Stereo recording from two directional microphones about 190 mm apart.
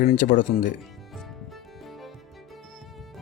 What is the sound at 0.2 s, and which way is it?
Speech, 40° left (ahead or behind).